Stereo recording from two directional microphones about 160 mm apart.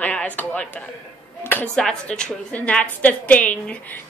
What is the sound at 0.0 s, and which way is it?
Speech, 10° left (ahead or behind).